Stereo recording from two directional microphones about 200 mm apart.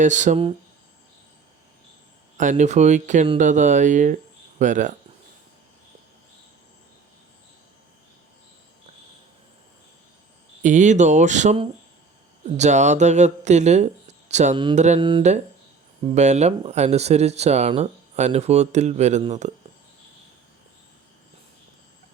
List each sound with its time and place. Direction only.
0.0 s speech: 40° right (ahead or behind)
2.4 s speech: 40° right (ahead or behind)
10.6 s speech: 40° right (ahead or behind)
14.8 s mantra: 25° right (ahead or behind)
16.0 s speech: 35° right (ahead or behind)